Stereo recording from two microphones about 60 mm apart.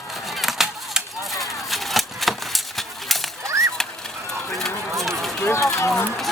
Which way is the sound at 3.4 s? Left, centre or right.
Right.